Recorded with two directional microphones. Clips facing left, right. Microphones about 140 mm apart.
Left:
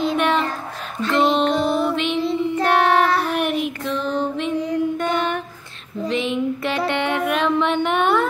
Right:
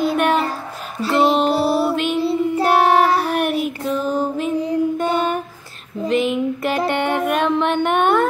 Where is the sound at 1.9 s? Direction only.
5° right (ahead or behind).